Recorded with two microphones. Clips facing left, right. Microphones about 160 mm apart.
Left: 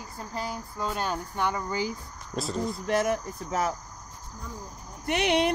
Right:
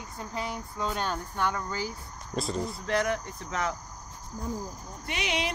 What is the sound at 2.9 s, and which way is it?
Speech, 25° left (ahead or behind).